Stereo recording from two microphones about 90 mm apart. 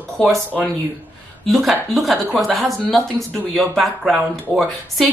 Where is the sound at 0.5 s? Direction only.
20° left (ahead or behind).